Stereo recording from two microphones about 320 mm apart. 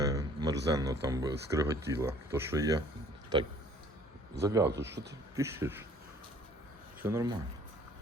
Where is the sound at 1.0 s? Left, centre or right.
Centre.